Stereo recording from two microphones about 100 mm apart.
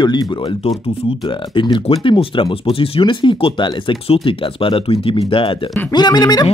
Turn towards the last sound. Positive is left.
turn(degrees=40)  # may be behind; listen again after turning